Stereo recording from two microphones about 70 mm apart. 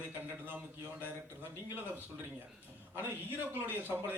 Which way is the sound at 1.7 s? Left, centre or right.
Right.